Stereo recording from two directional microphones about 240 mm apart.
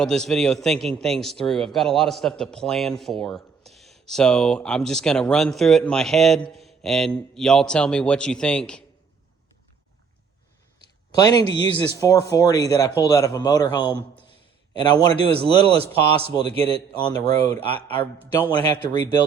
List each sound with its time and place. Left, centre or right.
0.0 s a man's voice: centre
6.5 s mantra: centre
7.3 s a man's voice: centre
11.1 s speech: centre
14.9 s a man's voice: right